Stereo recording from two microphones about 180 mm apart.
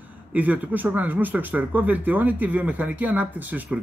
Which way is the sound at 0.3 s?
10° right (ahead or behind).